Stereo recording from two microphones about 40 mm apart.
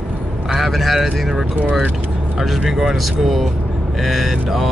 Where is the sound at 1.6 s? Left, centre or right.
Right.